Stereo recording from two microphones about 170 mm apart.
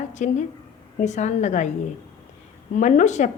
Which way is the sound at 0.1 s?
45° left (ahead or behind).